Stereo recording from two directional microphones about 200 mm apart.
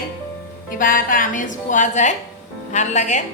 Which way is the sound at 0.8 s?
45° left (ahead or behind).